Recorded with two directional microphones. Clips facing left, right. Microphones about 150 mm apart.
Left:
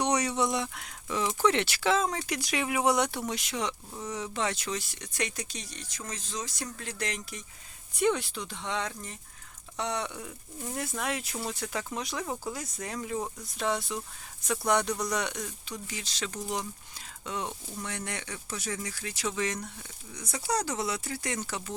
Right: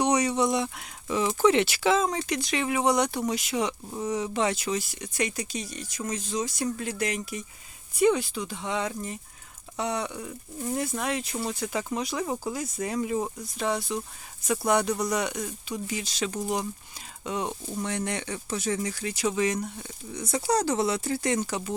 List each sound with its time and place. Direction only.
0.0 s speech: centre (ahead or behind)
17.7 s speech: 25° right (ahead or behind)
19.1 s speech: 15° right (ahead or behind)
20.1 s speech: 30° right (ahead or behind)